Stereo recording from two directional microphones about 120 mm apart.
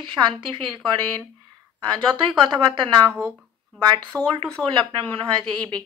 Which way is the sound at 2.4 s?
40° right (ahead or behind).